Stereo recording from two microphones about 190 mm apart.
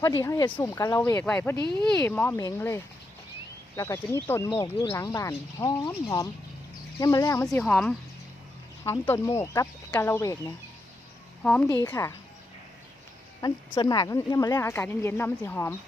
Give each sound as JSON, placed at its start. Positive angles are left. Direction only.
{"t": 0.0, "sound": "speech", "side_deg": 15}
{"t": 7.6, "sound": "speech", "side_deg": 5}
{"t": 11.4, "sound": "speech", "side_deg": 5}
{"t": 11.7, "sound": "speech", "side_deg": 15}
{"t": 13.4, "sound": "speech", "side_deg": 20}